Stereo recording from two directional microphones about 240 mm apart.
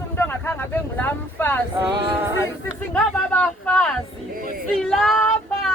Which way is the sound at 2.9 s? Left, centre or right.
Centre.